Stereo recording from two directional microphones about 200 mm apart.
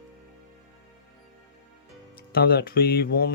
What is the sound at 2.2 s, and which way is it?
Speech, 50° left (ahead or behind).